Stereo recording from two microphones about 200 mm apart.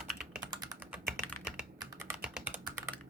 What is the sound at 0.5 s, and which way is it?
Typing, 20° right (ahead or behind).